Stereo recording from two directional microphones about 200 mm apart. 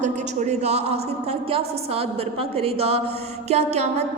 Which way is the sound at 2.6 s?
30° right (ahead or behind).